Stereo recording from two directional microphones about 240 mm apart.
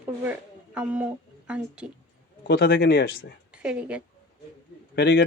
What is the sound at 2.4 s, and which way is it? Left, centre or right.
Speech, left.